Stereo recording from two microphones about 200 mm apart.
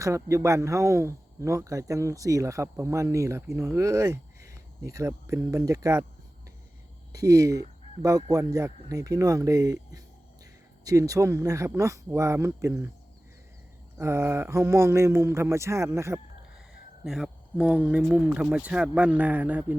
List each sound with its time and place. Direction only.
0.0 s speech: 15° right (ahead or behind)
7.1 s speech: 15° right (ahead or behind)
14.0 s speech: 15° right (ahead or behind)
16.6 s speech: 5° right (ahead or behind)